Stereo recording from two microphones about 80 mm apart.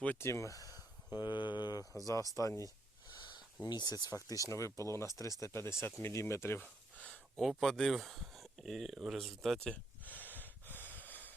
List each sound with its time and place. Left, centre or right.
0.2 s speech: left
1.8 s speech: centre
2.3 s speech: left
3.1 s a sound: left
3.6 s speech: left
6.6 s a sound: centre
7.3 s speech: centre
9.7 s gasp: left